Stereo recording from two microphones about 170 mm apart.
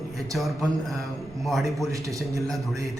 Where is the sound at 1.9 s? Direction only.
20° right (ahead or behind).